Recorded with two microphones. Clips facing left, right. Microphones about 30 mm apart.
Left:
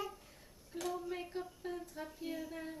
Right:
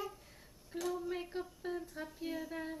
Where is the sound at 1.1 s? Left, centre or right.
Centre.